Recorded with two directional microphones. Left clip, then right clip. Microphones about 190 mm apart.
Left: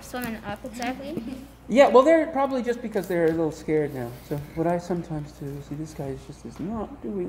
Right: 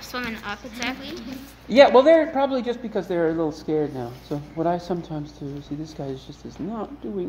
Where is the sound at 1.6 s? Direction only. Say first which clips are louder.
Right 3 dB; 10° right (ahead or behind).